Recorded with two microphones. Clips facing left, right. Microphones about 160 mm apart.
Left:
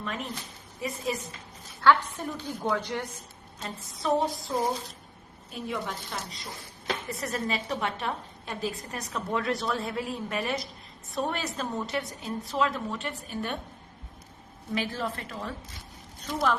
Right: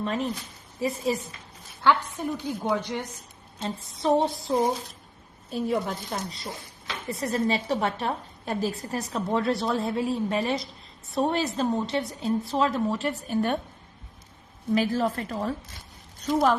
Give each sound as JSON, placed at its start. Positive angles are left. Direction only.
{"t": 0.0, "sound": "a woman's voice", "side_deg": -30}
{"t": 1.8, "sound": "a woman's voice", "side_deg": -15}
{"t": 3.9, "sound": "a woman's voice", "side_deg": -30}
{"t": 5.5, "sound": "a woman's voice", "side_deg": -40}
{"t": 14.8, "sound": "a woman's voice", "side_deg": -40}